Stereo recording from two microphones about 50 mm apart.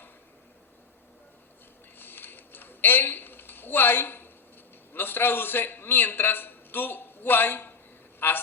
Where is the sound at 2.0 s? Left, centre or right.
Left.